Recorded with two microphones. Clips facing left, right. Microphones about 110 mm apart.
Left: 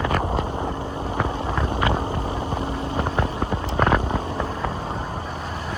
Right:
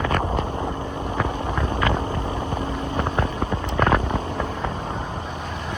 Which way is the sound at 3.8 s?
15° left (ahead or behind).